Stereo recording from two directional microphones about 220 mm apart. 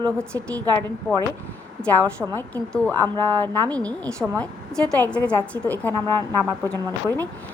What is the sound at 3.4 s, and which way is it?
A woman's voice, 5° left (ahead or behind).